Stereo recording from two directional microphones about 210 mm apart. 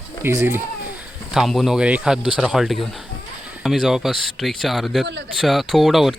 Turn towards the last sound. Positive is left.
turn(degrees=0)  # may be behind; listen again after turning